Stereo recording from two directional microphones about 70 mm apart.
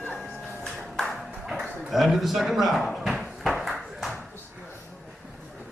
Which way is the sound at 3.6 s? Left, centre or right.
Centre.